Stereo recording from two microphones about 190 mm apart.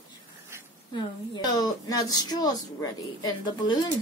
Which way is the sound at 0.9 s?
20° left (ahead or behind).